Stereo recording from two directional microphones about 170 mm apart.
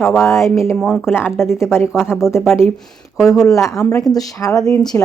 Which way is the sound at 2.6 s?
5° left (ahead or behind).